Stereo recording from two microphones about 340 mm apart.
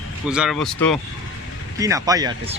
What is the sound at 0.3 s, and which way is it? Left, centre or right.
Speech, centre.